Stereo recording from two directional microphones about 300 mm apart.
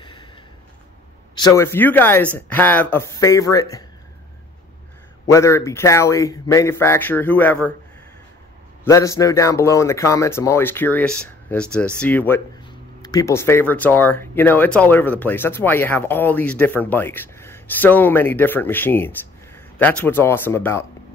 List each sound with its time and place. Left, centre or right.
0.0 s a sound: centre
1.3 s speech: centre
5.2 s speech: centre
8.8 s speech: centre